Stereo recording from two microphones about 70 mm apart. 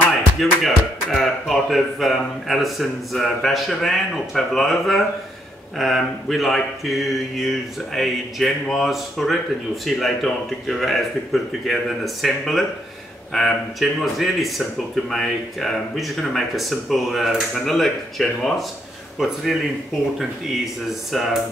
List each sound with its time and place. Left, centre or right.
0.4 s speech: centre
21.1 s speech: centre